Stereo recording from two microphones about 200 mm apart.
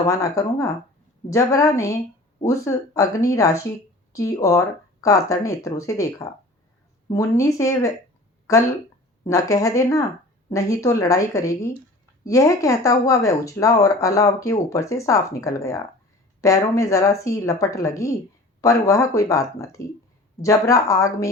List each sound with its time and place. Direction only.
0.1 s speech: 15° left (ahead or behind)
9.2 s speech: 15° left (ahead or behind)